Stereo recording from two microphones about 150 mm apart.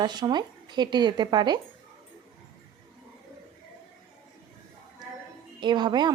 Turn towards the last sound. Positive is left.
turn(degrees=-30)  # may be behind; listen again after turning